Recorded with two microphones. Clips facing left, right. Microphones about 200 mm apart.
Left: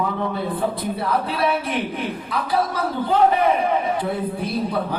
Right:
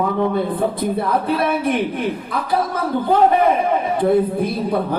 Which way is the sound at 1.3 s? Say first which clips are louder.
Right 4 dB; 55° right (ahead or behind).